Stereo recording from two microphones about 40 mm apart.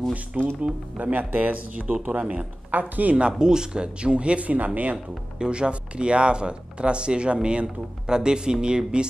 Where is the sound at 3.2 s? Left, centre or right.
Right.